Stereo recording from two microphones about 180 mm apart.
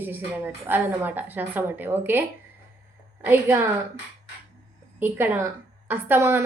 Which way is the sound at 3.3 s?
10° right (ahead or behind).